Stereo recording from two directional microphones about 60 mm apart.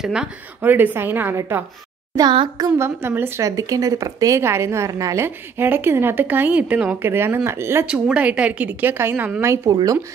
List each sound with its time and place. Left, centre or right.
0.0 s a woman's voice: centre
0.6 s speech: right
2.1 s a child's voice: right
2.8 s a woman's voice: right
3.3 s speech: right
4.4 s a woman's voice: right
5.2 s speech: right
7.0 s a woman's voice: right
7.8 s a woman's voice: centre; by 9.3 s right